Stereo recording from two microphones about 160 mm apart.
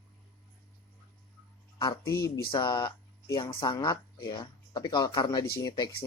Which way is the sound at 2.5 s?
30° left (ahead or behind).